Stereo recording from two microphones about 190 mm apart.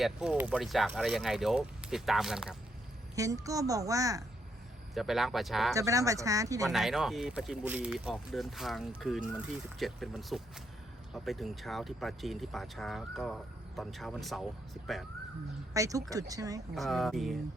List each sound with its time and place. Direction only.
0.0 s speech: 5° right (ahead or behind)
3.2 s speech: 15° right (ahead or behind)
4.9 s speech: centre (ahead or behind)
5.7 s speech: 15° right (ahead or behind)
6.7 s speech: centre (ahead or behind)
15.7 s speech: 15° right (ahead or behind)
16.7 s speech: centre (ahead or behind)